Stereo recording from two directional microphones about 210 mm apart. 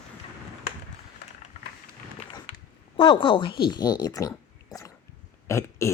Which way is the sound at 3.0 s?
25° left (ahead or behind).